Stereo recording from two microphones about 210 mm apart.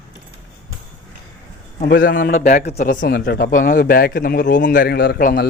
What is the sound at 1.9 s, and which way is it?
A man's voice, 50° left (ahead or behind).